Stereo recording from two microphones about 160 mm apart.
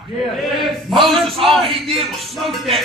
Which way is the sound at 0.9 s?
Centre (ahead or behind).